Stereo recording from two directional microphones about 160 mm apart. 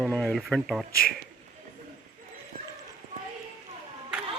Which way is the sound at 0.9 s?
70° left (ahead or behind).